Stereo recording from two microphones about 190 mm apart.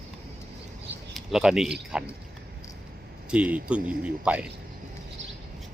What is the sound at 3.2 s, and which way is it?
Speech, 5° right (ahead or behind).